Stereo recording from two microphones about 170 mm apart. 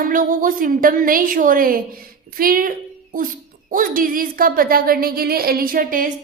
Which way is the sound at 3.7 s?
55° right (ahead or behind).